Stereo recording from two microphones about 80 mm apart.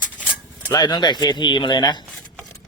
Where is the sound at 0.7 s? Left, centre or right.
Left.